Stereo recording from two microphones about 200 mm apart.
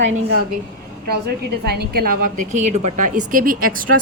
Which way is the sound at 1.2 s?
50° right (ahead or behind).